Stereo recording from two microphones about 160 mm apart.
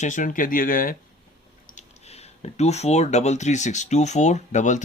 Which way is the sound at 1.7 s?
40° left (ahead or behind).